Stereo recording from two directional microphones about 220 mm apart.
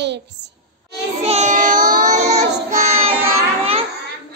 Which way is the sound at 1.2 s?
30° right (ahead or behind).